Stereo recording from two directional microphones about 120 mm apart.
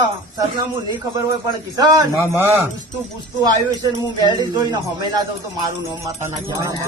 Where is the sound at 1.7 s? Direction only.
30° right (ahead or behind).